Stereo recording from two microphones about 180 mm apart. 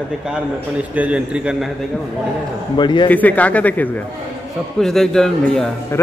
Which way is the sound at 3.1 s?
10° left (ahead or behind).